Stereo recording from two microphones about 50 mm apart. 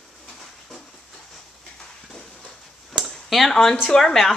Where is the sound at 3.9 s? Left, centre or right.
Centre.